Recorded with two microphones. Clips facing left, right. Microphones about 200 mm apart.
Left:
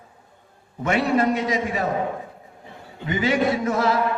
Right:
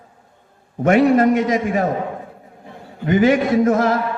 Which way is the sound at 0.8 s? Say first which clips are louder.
Right 7 dB; 45° right (ahead or behind).